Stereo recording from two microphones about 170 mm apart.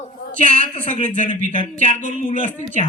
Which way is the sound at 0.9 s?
45° left (ahead or behind).